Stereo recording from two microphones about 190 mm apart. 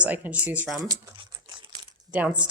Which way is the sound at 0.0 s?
10° right (ahead or behind).